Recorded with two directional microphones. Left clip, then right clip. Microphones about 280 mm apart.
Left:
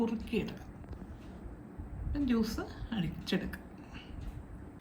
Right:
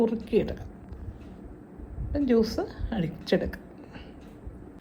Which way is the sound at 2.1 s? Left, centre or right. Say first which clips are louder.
Right 10 dB; centre.